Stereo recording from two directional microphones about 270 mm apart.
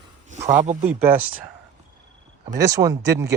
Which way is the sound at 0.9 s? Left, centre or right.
Centre.